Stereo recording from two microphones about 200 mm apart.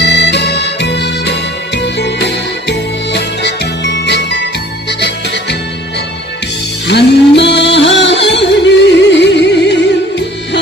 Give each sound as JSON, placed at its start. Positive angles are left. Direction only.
{"t": 0.0, "sound": "music", "side_deg": 60}
{"t": 6.9, "sound": "music", "side_deg": 60}